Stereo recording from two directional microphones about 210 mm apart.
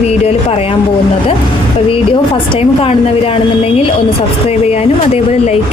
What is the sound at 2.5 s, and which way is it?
Speech, 30° left (ahead or behind).